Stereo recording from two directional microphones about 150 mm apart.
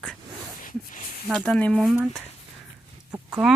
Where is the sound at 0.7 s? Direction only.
60° left (ahead or behind).